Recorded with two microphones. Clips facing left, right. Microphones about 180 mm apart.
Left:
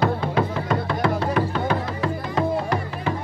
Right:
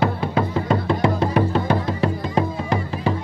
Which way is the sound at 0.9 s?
25° right (ahead or behind).